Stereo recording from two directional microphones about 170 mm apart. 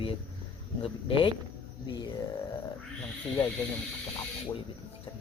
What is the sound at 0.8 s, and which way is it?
Speech, 30° left (ahead or behind).